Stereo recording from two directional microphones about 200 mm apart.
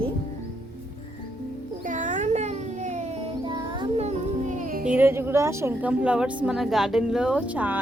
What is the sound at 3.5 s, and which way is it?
Music, 25° right (ahead or behind).